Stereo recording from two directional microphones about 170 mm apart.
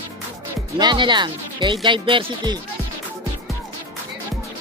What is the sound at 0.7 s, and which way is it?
Speech, 25° right (ahead or behind).